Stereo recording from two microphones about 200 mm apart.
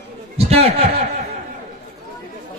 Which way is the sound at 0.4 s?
30° right (ahead or behind).